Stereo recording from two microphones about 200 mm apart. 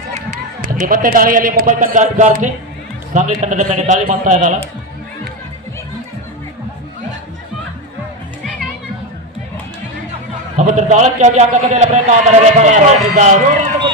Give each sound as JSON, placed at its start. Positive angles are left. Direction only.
{"t": 0.8, "sound": "a man's voice", "side_deg": -45}
{"t": 10.6, "sound": "a man's voice", "side_deg": -35}